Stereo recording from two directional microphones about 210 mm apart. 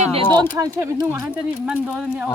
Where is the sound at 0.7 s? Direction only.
10° right (ahead or behind).